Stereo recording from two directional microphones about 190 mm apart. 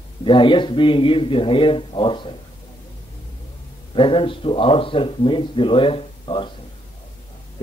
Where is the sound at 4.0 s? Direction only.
25° left (ahead or behind).